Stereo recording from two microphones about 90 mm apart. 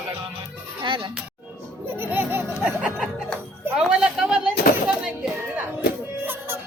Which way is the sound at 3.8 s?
10° right (ahead or behind).